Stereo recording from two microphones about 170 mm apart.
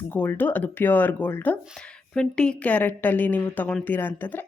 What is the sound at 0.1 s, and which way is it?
A woman's voice, 10° left (ahead or behind).